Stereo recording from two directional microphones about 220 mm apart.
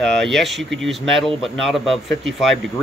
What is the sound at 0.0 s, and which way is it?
A man's voice, centre (ahead or behind).